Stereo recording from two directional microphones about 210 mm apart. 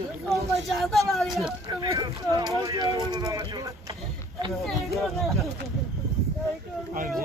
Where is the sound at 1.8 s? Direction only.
15° right (ahead or behind).